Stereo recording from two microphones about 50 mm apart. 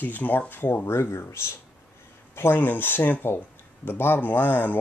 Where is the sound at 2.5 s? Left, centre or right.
Left.